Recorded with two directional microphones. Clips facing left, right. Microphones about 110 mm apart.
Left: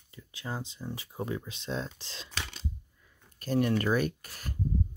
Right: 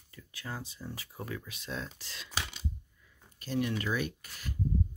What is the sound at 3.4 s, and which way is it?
Speech, 45° left (ahead or behind).